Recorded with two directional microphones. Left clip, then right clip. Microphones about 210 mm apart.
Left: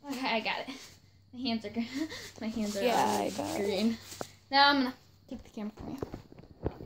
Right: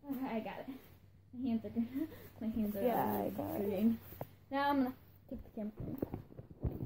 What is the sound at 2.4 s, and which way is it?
Sanding, 20° left (ahead or behind).